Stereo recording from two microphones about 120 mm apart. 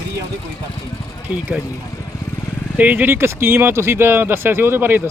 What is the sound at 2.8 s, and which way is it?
Speech, 15° right (ahead or behind).